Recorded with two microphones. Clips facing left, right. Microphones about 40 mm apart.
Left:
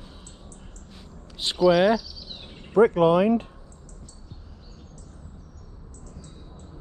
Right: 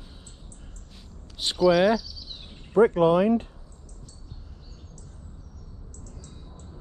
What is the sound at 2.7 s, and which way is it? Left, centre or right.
Speech, left.